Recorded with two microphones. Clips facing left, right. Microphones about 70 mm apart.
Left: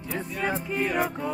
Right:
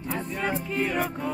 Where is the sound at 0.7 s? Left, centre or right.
Centre.